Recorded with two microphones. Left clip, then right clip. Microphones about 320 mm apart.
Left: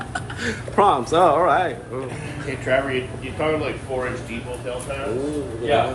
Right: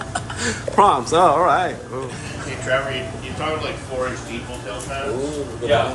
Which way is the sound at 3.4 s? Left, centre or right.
Left.